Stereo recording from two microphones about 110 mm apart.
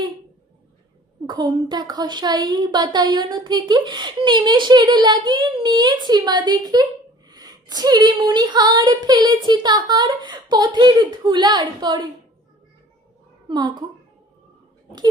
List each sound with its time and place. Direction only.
1.3 s speech: 45° right (ahead or behind)
13.5 s speech: 40° right (ahead or behind)